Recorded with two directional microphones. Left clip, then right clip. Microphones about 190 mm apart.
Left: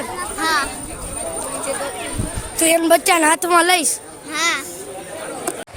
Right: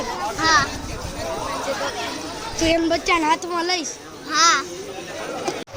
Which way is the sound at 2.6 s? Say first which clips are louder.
Left 5 dB; 35° left (ahead or behind).